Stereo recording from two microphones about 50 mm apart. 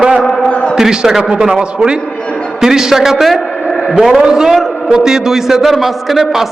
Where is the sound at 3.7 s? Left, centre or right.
Centre.